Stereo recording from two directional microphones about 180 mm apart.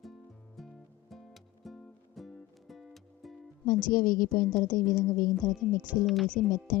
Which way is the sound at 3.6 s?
50° left (ahead or behind).